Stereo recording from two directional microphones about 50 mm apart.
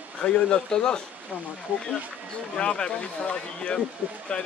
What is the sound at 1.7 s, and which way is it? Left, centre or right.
Speech, right.